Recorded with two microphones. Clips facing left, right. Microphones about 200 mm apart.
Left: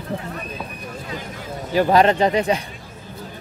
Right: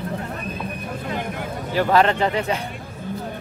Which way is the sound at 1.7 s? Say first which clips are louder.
Left 3 dB; 15° left (ahead or behind).